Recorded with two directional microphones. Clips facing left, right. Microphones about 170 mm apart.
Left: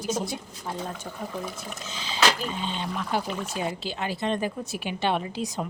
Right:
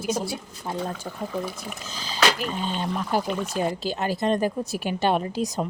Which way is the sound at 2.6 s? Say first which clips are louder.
Right 3 dB; 45° right (ahead or behind).